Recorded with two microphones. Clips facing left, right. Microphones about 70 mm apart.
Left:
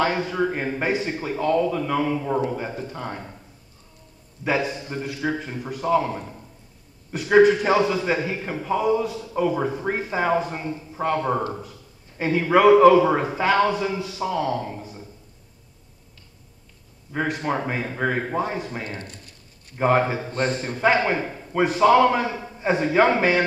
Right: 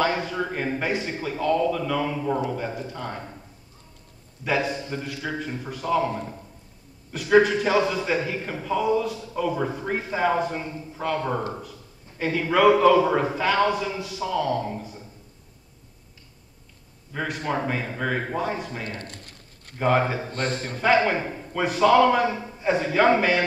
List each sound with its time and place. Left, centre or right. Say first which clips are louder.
0.0 s a man's voice: left 2 dB; left
4.5 s a man's voice: left 1 dB; left
7.1 s a man's voice: left 3 dB; left
17.1 s a man's voice: left 3 dB; left
19.0 s a sound: right 1 dB; right
19.8 s a man's voice: left 2 dB; left